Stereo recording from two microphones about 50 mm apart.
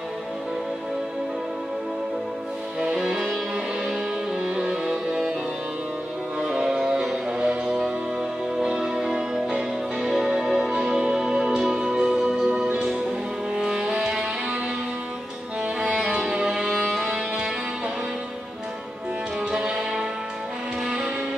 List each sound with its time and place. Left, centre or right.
2.8 s music: centre
6.4 s music: centre
10.7 s music: centre
16.0 s music: centre
19.5 s music: centre